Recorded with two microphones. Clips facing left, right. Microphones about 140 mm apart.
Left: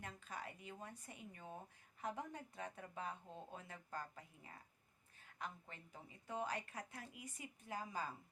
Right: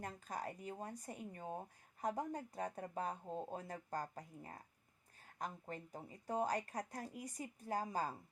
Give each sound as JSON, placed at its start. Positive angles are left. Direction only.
{"t": 0.0, "sound": "speech", "side_deg": -40}